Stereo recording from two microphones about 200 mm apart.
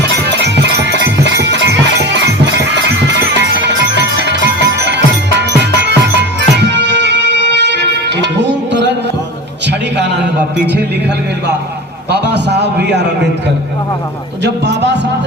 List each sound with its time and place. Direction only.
0.0 s music: 60° right (ahead or behind)
12.1 s a man's voice: 55° right (ahead or behind)
14.4 s a man's voice: 60° right (ahead or behind)